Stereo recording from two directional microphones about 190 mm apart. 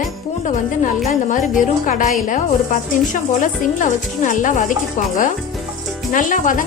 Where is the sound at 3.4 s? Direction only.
40° left (ahead or behind).